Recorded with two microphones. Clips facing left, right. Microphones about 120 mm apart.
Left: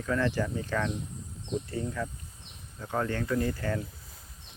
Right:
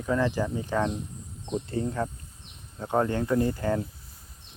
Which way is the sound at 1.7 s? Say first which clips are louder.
Right 4 dB; 30° right (ahead or behind).